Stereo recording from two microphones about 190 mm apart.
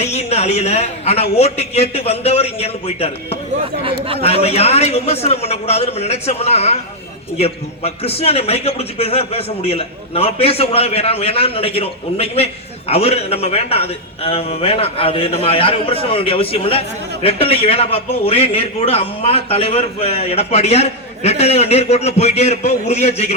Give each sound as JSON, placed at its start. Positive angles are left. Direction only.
{"t": 0.0, "sound": "a man's voice", "side_deg": 35}
{"t": 3.8, "sound": "speech", "side_deg": -30}
{"t": 4.2, "sound": "a man's voice", "side_deg": 30}